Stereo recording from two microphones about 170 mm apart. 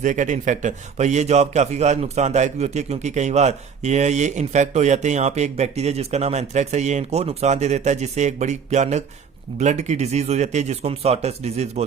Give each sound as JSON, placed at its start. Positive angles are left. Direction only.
{"t": 0.0, "sound": "a man's voice", "side_deg": -50}